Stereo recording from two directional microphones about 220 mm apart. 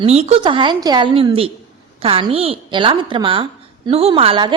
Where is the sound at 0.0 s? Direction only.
30° right (ahead or behind).